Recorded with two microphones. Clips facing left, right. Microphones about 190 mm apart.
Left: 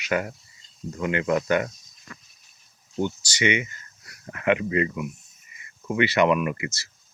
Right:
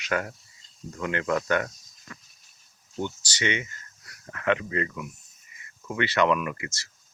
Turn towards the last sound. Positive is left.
turn(degrees=10)  # may be behind; listen again after turning